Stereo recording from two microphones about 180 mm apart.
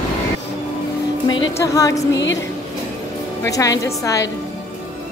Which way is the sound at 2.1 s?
90° left.